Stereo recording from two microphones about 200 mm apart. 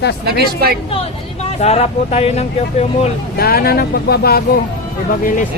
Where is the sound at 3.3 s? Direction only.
50° left (ahead or behind).